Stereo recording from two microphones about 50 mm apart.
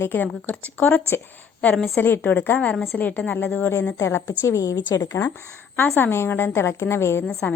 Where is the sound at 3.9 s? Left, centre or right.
Left.